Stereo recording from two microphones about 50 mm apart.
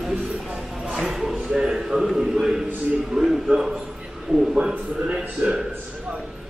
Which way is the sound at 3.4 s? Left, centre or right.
Centre.